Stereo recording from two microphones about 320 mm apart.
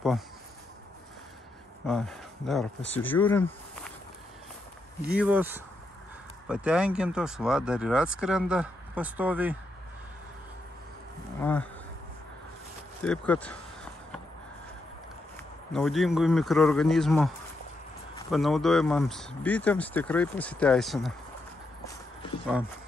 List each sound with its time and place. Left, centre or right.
1.9 s speech: centre
5.1 s speech: centre
13.0 s speech: centre
15.7 s speech: centre
18.3 s speech: centre